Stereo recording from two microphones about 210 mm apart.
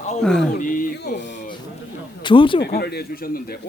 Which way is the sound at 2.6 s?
50° left (ahead or behind).